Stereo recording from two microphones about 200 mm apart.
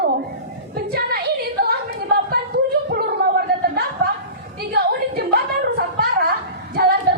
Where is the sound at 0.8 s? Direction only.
50° right (ahead or behind).